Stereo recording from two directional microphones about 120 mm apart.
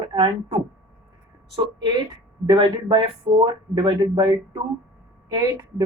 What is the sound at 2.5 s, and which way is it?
Speech, 40° right (ahead or behind).